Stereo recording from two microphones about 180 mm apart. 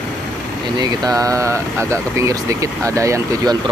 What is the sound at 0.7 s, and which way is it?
Speech, 20° right (ahead or behind).